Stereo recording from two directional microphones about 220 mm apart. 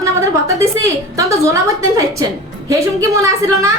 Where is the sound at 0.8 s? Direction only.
15° right (ahead or behind).